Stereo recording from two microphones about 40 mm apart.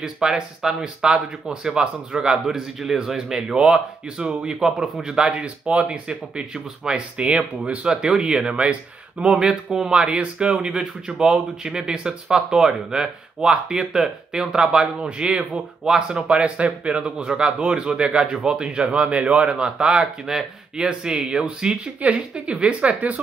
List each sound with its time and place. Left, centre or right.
0.0 s a man's voice: centre
5.4 s speech: right
7.2 s speech: right
15.8 s a man's voice: centre
16.3 s speech: right